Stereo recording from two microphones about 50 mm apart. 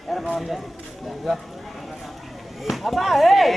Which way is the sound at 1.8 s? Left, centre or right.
Centre.